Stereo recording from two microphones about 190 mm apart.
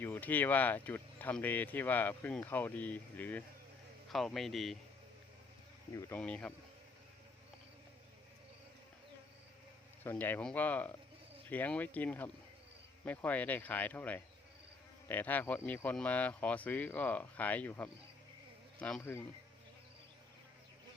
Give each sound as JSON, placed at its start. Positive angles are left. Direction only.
{"t": 0.0, "sound": "speech", "side_deg": 10}
{"t": 6.1, "sound": "speech", "side_deg": 5}
{"t": 10.0, "sound": "speech", "side_deg": 10}